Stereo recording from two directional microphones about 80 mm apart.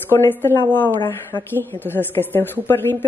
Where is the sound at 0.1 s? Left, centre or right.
Left.